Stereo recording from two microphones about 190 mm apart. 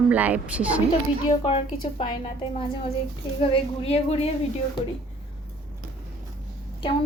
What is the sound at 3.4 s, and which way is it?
Speech, 30° left (ahead or behind).